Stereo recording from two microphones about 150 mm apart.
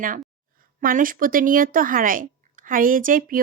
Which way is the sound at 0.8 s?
70° right (ahead or behind).